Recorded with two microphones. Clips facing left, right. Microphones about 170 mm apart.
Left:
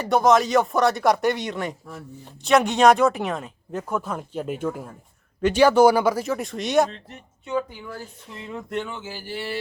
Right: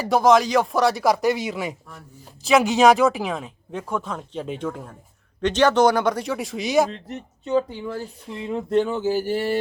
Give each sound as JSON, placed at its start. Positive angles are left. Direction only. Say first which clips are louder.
{"t": 0.0, "sound": "speech", "louder": "right 1 dB", "side_deg": 0}
{"t": 6.9, "sound": "speech", "louder": "right 8 dB", "side_deg": -35}